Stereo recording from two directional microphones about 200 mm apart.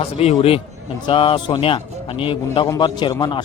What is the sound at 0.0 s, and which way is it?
A man's voice, 30° left (ahead or behind).